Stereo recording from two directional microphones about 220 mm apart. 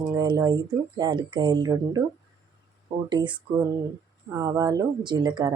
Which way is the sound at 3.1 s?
20° right (ahead or behind).